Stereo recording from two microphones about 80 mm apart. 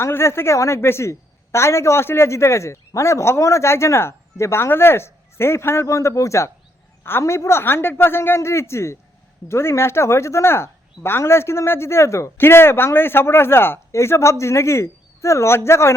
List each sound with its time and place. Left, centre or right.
0.0 s speech: left